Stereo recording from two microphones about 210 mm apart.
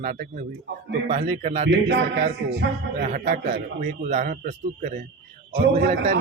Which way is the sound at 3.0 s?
40° right (ahead or behind).